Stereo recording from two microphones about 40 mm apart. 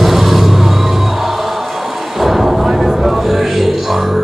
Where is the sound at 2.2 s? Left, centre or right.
Centre.